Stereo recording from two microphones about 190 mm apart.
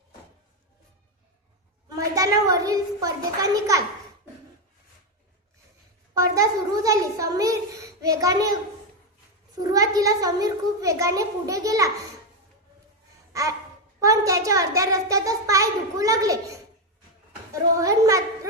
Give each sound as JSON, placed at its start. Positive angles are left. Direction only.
{"t": 1.9, "sound": "a child's voice", "side_deg": -20}
{"t": 6.1, "sound": "a child's voice", "side_deg": -15}
{"t": 9.6, "sound": "a child's voice", "side_deg": -20}
{"t": 13.3, "sound": "a sound", "side_deg": -15}
{"t": 14.0, "sound": "a child's voice", "side_deg": -15}
{"t": 17.5, "sound": "a child's voice", "side_deg": -15}